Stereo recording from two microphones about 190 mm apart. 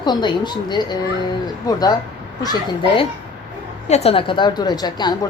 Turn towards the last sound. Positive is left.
turn(degrees=20)  # may be behind; listen again after turning